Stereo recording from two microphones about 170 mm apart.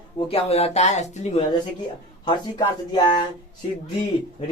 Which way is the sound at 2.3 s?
25° left (ahead or behind).